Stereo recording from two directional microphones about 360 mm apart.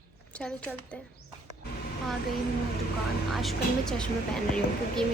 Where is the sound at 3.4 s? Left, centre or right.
Centre.